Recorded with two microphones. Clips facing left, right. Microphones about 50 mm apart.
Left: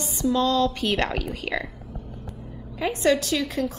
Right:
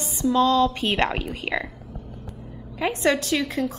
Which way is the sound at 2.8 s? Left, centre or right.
Right.